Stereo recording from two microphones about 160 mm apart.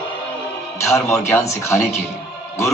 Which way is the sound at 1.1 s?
20° left (ahead or behind).